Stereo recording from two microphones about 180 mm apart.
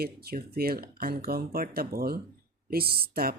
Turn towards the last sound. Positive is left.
turn(degrees=-55)  # may be behind; listen again after turning